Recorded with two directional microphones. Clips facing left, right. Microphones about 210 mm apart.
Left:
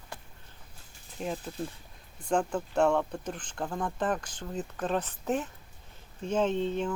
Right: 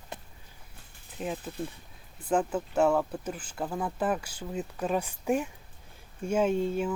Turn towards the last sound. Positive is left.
turn(degrees=-10)  # may be behind; listen again after turning